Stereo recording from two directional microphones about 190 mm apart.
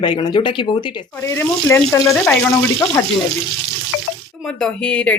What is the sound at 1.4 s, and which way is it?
Speech, 15° left (ahead or behind).